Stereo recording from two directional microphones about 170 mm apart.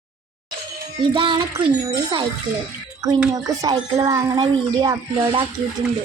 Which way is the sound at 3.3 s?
20° right (ahead or behind).